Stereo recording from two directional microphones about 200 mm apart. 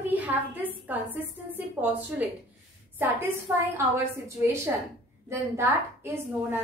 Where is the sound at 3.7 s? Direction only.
10° right (ahead or behind).